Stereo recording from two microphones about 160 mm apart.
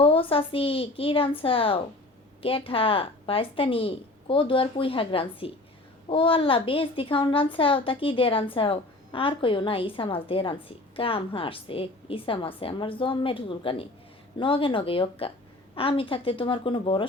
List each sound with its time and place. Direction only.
0.0 s a woman's voice: 35° left (ahead or behind)